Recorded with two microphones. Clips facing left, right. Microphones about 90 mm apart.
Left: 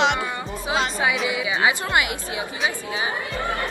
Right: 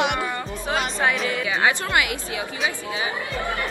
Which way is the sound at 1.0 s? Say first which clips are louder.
Even; 5° left (ahead or behind).